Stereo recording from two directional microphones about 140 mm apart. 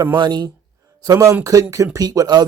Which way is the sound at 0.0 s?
30° right (ahead or behind).